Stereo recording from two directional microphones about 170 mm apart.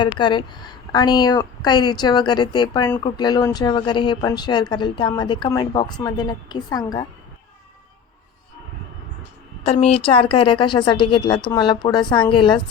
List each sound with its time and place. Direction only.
0.0 s speech: 30° left (ahead or behind)
9.8 s speech: 35° left (ahead or behind)